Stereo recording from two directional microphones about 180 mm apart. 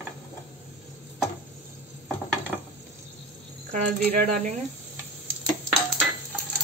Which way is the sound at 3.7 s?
40° right (ahead or behind).